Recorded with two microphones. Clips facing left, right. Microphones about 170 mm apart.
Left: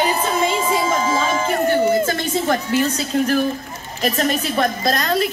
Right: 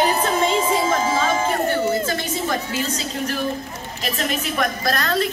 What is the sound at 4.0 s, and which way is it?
Speech, 40° left (ahead or behind).